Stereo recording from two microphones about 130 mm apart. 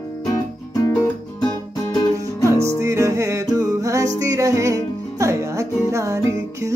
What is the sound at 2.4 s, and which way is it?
Music, 25° right (ahead or behind).